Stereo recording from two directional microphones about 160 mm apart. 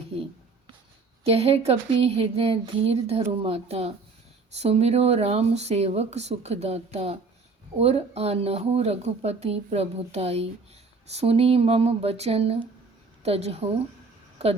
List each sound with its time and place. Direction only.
1.2 s speech: 40° right (ahead or behind)